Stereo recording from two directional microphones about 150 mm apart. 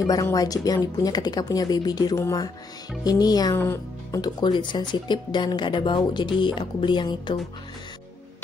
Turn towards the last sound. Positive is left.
turn(degrees=30)  # may be behind; listen again after turning